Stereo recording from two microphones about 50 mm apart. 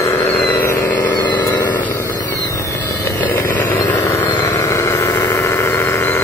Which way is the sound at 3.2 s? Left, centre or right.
Left.